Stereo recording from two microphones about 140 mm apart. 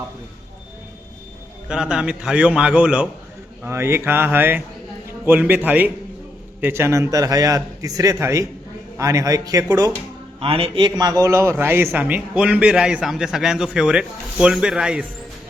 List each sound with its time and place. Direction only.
1.6 s a man's voice: 5° right (ahead or behind)
3.6 s a man's voice: 20° right (ahead or behind)
10.4 s a man's voice: 40° right (ahead or behind); by 15.0 s 5° right (ahead or behind)